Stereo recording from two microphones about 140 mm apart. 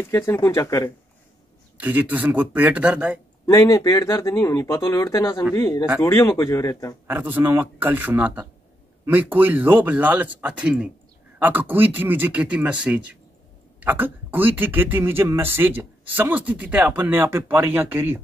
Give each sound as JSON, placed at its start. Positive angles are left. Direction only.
{"t": 0.0, "sound": "speech", "side_deg": 15}
{"t": 1.8, "sound": "speech", "side_deg": -10}
{"t": 3.4, "sound": "speech", "side_deg": 25}
{"t": 7.1, "sound": "speech", "side_deg": -15}